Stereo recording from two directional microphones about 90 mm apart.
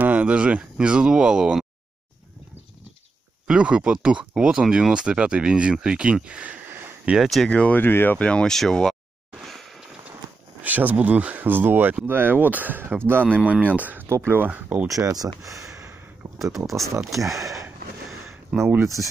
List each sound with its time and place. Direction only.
0.0 s speech: 15° right (ahead or behind)
3.4 s speech: 10° right (ahead or behind)
7.2 s speech: 5° left (ahead or behind)
9.4 s a sound: centre (ahead or behind)
10.6 s speech: 20° right (ahead or behind)
14.0 s speech: 30° right (ahead or behind)
14.9 s speech: 40° right (ahead or behind)
15.4 s a sound: 35° right (ahead or behind)
16.5 s speech: centre (ahead or behind)